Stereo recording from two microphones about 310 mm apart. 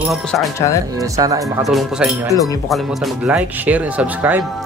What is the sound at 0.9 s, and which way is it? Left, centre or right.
Speech, centre.